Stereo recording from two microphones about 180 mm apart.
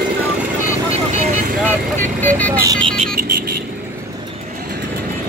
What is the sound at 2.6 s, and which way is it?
Speech, 20° right (ahead or behind).